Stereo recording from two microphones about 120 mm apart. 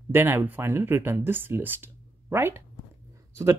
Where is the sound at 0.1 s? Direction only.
20° right (ahead or behind).